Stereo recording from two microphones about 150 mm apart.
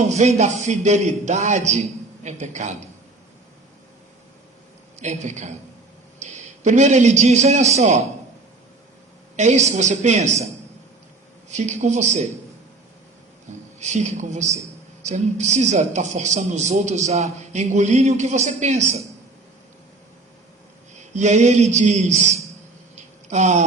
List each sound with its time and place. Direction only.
0.0 s a woman's voice: 50° right (ahead or behind)
4.9 s a woman's voice: 50° right (ahead or behind)
9.3 s a woman's voice: 50° right (ahead or behind)
13.7 s a woman's voice: 50° right (ahead or behind)
21.0 s a woman's voice: 50° right (ahead or behind)